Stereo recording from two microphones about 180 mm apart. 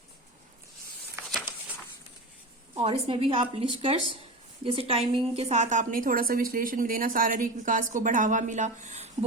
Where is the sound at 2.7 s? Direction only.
35° right (ahead or behind).